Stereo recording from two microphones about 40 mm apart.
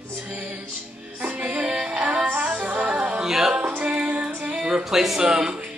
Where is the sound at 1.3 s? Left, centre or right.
Right.